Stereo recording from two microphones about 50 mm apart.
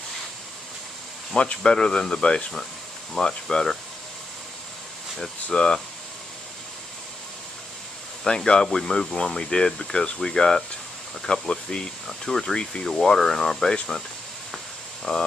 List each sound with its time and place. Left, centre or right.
1.3 s speech: centre
5.5 s speech: centre
8.2 s speech: centre
15.1 s speech: left